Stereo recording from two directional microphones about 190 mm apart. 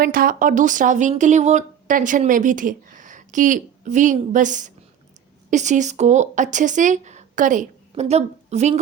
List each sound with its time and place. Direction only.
0.0 s speech: 50° right (ahead or behind)